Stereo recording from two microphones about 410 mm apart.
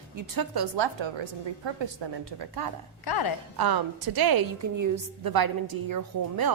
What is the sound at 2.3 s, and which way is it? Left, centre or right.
Speech, right.